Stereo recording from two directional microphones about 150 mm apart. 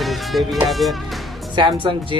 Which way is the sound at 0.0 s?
Centre (ahead or behind).